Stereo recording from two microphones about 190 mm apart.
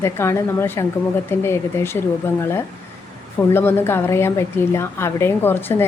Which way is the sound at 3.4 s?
10° left (ahead or behind).